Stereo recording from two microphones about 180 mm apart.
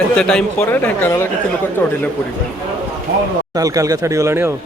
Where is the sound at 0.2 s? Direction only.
5° left (ahead or behind).